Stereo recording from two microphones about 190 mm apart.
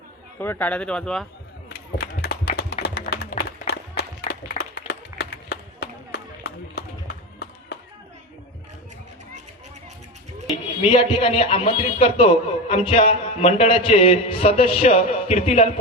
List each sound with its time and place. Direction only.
0.3 s speech: 10° left (ahead or behind)
1.7 s run: 55° left (ahead or behind)
2.8 s music: 55° left (ahead or behind)
4.3 s run: 60° left (ahead or behind)
10.8 s a man's voice: 30° left (ahead or behind)